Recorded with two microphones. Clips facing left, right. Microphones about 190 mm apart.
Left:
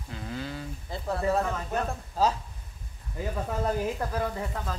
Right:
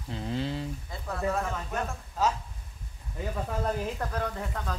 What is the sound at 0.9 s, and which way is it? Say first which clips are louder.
A man's voice: left 4 dB; 30° left (ahead or behind).